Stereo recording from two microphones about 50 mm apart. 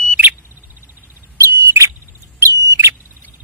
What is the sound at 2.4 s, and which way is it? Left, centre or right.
Bird, right.